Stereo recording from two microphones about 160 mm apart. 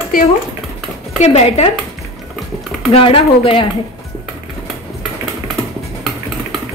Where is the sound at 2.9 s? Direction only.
35° left (ahead or behind).